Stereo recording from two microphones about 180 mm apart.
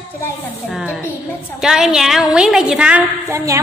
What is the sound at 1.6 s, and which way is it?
A woman's voice, 5° right (ahead or behind).